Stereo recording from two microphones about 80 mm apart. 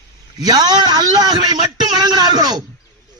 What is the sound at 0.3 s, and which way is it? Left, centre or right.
A man's voice, right.